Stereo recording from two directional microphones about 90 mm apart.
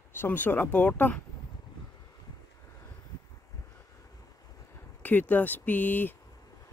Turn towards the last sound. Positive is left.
turn(degrees=20)  # may be behind; listen again after turning